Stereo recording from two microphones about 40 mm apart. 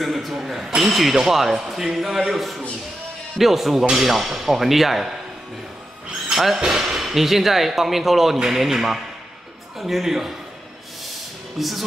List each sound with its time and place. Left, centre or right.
0.0 s speech: centre
6.3 s speech: centre
11.5 s speech: centre